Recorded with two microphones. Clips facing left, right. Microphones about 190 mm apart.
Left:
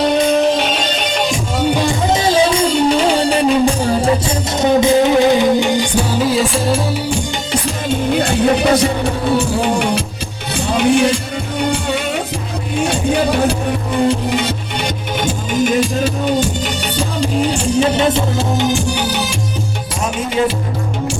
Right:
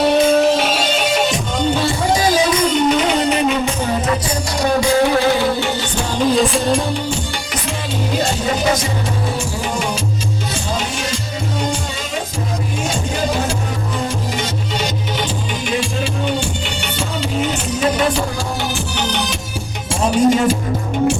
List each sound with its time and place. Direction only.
0.0 s music: 5° right (ahead or behind)
1.7 s music: 15° left (ahead or behind)
2.2 s music: 25° left (ahead or behind)
4.5 s music: 20° left (ahead or behind); by 7.0 s centre (ahead or behind)
8.2 s music: 60° left (ahead or behind)
15.2 s music: 45° left (ahead or behind); by 19.4 s 5° left (ahead or behind)
20.1 s music: 45° right (ahead or behind)